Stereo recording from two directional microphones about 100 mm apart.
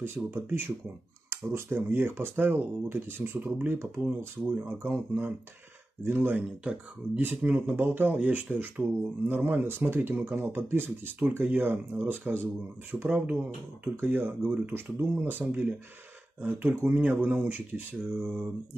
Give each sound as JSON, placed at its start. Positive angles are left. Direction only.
{"t": 0.0, "sound": "speech", "side_deg": -20}